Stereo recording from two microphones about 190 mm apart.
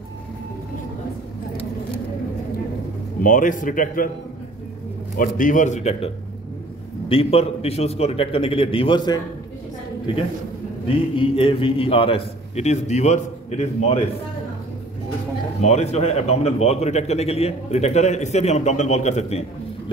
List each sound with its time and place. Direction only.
3.2 s a man's voice: 45° left (ahead or behind)
5.1 s a man's voice: 45° left (ahead or behind); by 9.2 s 25° left (ahead or behind)
11.1 s a man's voice: 30° left (ahead or behind)
15.6 s a man's voice: 35° left (ahead or behind)